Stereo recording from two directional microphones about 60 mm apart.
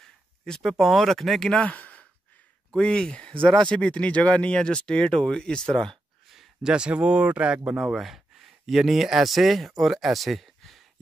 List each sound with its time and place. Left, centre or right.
0.6 s speech: centre
1.6 s a sound: left
2.7 s speech: centre
6.3 s a sound: centre
6.7 s speech: centre
7.7 s speech: centre